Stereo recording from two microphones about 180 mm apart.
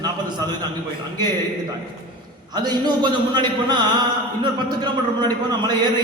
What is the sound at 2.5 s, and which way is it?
A man's voice, 25° right (ahead or behind).